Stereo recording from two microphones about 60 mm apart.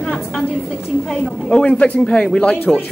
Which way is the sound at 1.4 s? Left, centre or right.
Centre.